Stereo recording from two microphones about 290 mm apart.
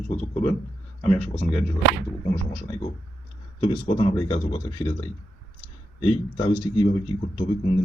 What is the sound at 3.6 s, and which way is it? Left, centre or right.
Speech, centre.